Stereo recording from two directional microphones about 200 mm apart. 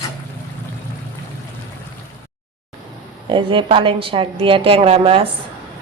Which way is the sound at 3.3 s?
25° right (ahead or behind).